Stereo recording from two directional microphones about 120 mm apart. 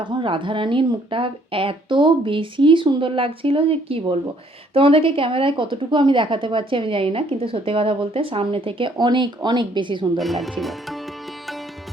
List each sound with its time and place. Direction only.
0.0 s speech: 40° right (ahead or behind)
10.2 s speech: centre (ahead or behind)